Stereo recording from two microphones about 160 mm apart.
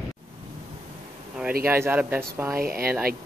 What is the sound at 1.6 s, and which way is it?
Speech, 15° right (ahead or behind).